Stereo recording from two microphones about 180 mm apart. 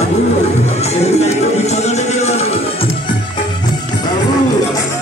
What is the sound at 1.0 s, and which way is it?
Music, 35° left (ahead or behind).